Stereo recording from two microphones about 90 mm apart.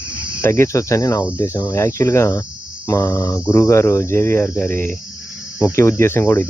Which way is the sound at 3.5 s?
35° left (ahead or behind).